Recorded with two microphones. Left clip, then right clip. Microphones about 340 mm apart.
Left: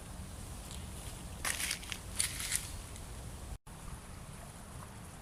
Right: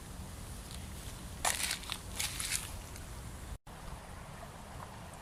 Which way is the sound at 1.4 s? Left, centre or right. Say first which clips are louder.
Right 3 dB; centre.